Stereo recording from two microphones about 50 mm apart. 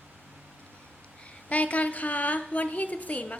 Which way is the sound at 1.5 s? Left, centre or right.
Left.